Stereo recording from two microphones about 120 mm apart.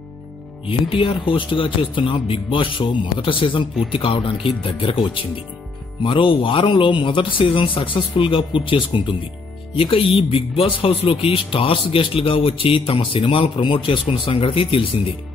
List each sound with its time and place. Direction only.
0.7 s speech: 50° left (ahead or behind)